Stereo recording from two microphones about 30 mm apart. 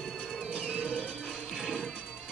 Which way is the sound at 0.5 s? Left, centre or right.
Right.